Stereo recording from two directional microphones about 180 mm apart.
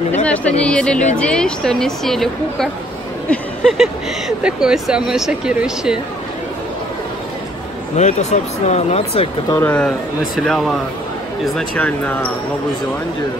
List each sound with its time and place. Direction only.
0.2 s speech: 10° left (ahead or behind)
7.9 s speech: 40° left (ahead or behind)
9.6 s speech: 5° left (ahead or behind)